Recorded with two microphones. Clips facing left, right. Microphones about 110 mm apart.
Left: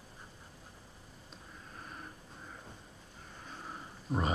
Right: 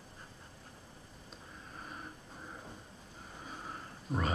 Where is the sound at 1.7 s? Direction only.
5° right (ahead or behind).